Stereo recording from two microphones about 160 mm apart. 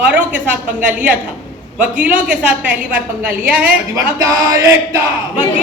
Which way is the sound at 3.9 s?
20° right (ahead or behind).